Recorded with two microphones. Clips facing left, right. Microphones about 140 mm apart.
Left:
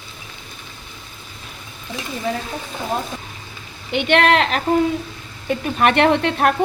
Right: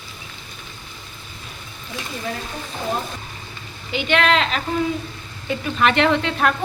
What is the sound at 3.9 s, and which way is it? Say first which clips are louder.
Speech: left 3 dB; 60° left (ahead or behind).